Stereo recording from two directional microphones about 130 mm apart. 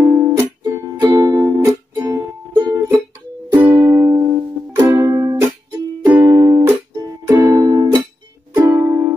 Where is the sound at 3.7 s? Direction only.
40° right (ahead or behind).